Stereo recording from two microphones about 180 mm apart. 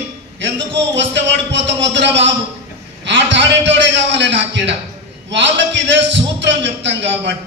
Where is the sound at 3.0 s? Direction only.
80° right.